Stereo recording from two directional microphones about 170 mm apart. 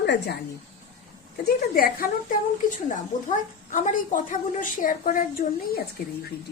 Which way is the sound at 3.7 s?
45° left (ahead or behind).